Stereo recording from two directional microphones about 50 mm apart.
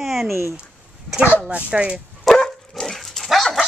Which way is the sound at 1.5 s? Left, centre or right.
Right.